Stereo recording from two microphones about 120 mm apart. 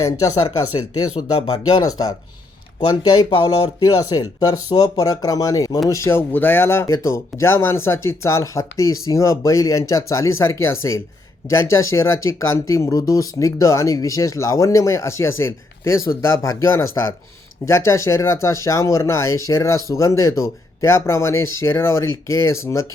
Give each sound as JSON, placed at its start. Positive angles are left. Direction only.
{"t": 0.0, "sound": "speech", "side_deg": 30}
{"t": 3.1, "sound": "speech", "side_deg": 45}